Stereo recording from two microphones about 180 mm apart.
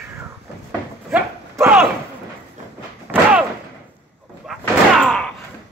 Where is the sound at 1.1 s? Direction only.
10° right (ahead or behind).